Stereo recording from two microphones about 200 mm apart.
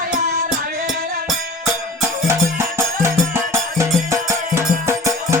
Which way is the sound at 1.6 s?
10° right (ahead or behind).